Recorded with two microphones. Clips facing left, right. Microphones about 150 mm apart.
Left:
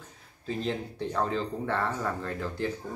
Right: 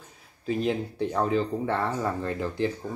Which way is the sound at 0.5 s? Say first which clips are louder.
Right 5 dB; 15° right (ahead or behind).